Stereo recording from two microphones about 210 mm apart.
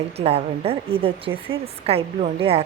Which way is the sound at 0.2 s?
30° right (ahead or behind).